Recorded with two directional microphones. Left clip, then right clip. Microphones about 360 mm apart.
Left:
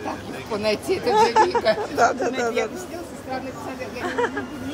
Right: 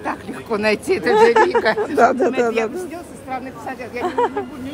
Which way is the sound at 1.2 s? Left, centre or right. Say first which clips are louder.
Right 4 dB; right.